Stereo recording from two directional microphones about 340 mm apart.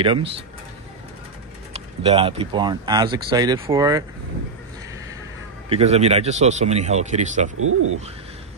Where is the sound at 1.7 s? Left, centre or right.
Centre.